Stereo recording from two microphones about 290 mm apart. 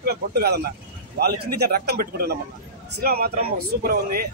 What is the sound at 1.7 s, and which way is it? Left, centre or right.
A man's voice, right.